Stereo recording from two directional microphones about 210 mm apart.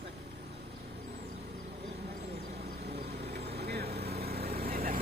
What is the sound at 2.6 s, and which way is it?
Vehicle, 50° right (ahead or behind).